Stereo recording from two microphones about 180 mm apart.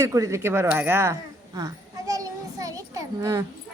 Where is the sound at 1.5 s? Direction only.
20° right (ahead or behind).